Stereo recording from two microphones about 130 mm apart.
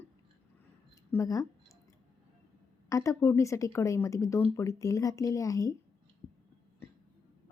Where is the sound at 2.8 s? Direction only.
25° left (ahead or behind).